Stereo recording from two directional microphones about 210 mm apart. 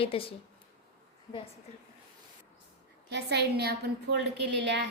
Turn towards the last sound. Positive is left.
turn(degrees=-55)  # may be behind; listen again after turning